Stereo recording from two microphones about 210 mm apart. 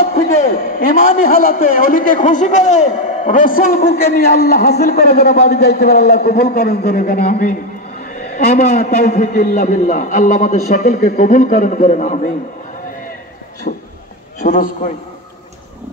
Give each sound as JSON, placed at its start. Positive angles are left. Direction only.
{"t": 0.7, "sound": "a man's voice", "side_deg": 45}
{"t": 13.7, "sound": "a man's voice", "side_deg": 45}